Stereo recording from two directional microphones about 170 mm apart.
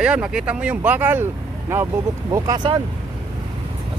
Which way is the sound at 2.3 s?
25° right (ahead or behind).